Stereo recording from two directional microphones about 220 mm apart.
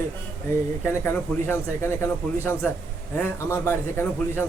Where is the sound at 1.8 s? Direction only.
10° left (ahead or behind).